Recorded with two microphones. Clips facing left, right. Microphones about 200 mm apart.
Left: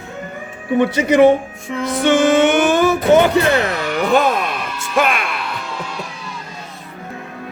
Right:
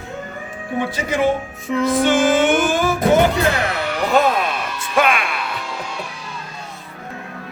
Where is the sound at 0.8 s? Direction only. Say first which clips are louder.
Left 8 dB; 70° left (ahead or behind).